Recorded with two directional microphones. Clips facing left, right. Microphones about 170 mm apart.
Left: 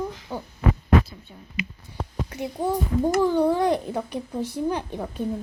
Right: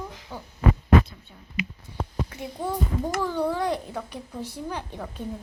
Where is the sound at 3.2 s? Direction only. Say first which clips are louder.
Left 4 dB; 20° left (ahead or behind).